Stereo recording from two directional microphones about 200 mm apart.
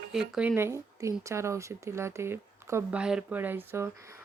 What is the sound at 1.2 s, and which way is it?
Speech, 15° right (ahead or behind).